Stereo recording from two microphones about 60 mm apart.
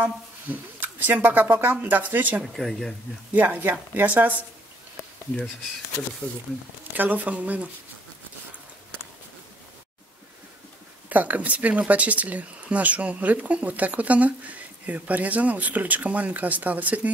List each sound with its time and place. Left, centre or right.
0.0 s speech: right
2.4 s speech: centre
3.3 s speech: right
6.9 s speech: right
11.1 s speech: right